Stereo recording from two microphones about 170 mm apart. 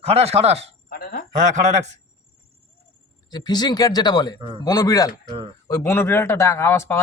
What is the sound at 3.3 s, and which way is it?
Speech, 25° left (ahead or behind).